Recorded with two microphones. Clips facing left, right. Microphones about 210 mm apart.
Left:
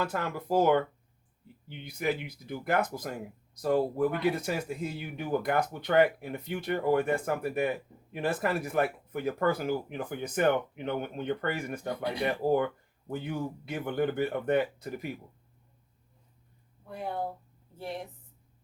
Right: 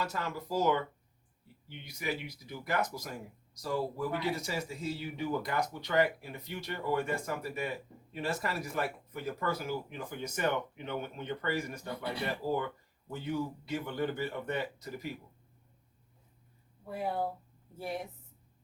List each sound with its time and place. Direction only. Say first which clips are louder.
0.0 s speech: left 4 dB; 55° left (ahead or behind)
16.9 s speech: right 1 dB; 5° right (ahead or behind)